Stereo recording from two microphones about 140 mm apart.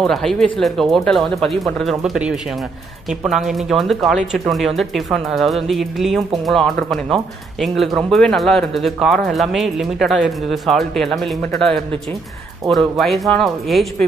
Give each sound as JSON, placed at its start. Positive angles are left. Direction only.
{"t": 0.0, "sound": "speech", "side_deg": 0}